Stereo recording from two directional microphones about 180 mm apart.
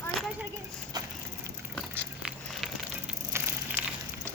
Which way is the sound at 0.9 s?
20° right (ahead or behind).